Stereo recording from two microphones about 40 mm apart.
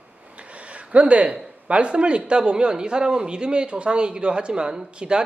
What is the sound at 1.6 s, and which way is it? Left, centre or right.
A man's voice, right.